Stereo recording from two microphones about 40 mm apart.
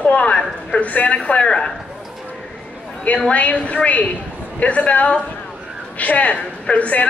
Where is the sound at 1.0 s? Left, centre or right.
Left.